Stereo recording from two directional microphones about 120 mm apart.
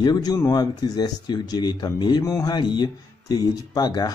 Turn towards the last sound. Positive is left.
turn(degrees=35)  # may be behind; listen again after turning